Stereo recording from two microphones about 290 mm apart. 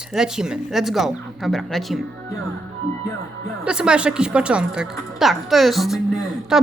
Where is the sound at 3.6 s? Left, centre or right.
Centre.